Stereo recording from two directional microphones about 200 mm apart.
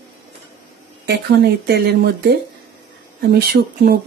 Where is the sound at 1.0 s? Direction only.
55° right (ahead or behind).